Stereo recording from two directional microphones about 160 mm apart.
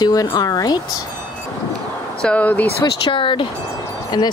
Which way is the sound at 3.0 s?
30° left (ahead or behind).